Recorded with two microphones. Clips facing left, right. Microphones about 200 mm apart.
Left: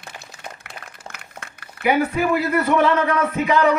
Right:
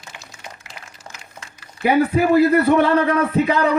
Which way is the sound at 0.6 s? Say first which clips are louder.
Left 2 dB; 60° left (ahead or behind).